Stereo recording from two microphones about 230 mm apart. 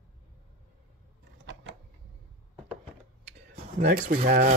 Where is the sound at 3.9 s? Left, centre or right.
Right.